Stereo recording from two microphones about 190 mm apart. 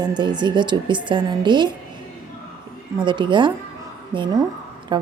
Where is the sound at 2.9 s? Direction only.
25° right (ahead or behind).